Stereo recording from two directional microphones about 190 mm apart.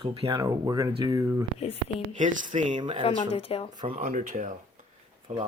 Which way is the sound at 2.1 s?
40° right (ahead or behind).